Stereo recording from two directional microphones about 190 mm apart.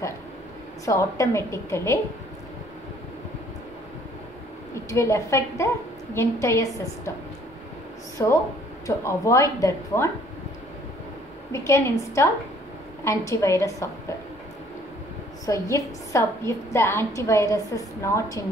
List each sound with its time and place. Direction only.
0.8 s a woman's voice: 15° left (ahead or behind)
4.7 s a woman's voice: 15° left (ahead or behind)
8.2 s a woman's voice: 20° left (ahead or behind)
11.5 s a woman's voice: 15° left (ahead or behind)
15.4 s a woman's voice: 15° left (ahead or behind)